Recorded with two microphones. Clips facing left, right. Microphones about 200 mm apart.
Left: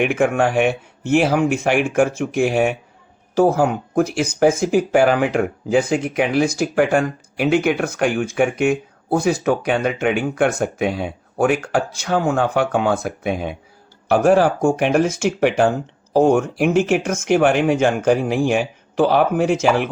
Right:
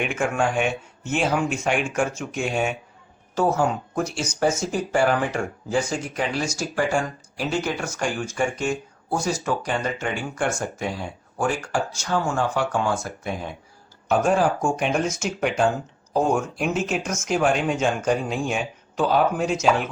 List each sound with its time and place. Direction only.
0.0 s speech: 60° left (ahead or behind)